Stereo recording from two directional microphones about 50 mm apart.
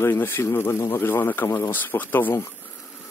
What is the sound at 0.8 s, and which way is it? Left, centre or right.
Speech, left.